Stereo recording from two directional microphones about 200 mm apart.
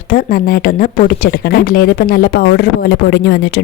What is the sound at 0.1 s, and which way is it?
A woman's voice, 45° left (ahead or behind).